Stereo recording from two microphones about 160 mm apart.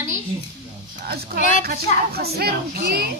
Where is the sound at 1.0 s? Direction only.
75° right (ahead or behind).